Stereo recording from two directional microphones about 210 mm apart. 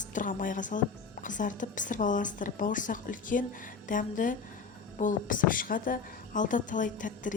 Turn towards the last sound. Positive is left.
turn(degrees=40)  # may be behind; listen again after turning